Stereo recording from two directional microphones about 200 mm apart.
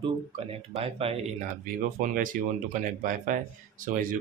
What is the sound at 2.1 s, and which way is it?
A man's voice, 45° right (ahead or behind).